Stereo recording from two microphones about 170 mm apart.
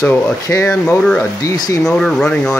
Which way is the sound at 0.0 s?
15° left (ahead or behind).